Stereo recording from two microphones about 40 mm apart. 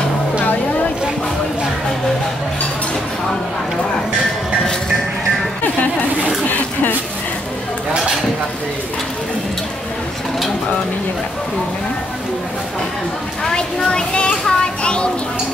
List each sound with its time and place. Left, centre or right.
13.6 s children playing: left